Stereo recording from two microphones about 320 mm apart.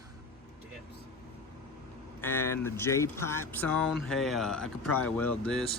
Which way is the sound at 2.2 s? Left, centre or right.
Centre.